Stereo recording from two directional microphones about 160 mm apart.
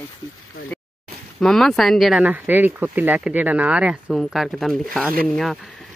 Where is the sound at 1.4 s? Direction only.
5° left (ahead or behind).